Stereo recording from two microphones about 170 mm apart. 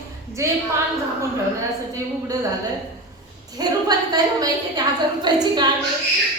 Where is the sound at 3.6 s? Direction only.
20° right (ahead or behind).